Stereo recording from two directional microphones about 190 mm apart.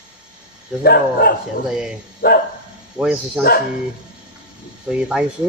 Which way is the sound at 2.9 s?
5° right (ahead or behind).